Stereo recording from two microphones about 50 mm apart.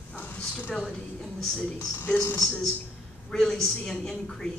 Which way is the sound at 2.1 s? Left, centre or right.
Left.